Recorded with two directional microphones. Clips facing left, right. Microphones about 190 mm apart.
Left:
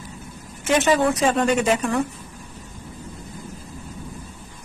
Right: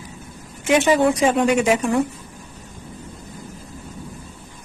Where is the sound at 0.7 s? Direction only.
15° right (ahead or behind).